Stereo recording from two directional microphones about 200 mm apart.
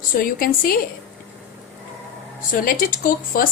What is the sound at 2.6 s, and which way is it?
Speech, 45° left (ahead or behind).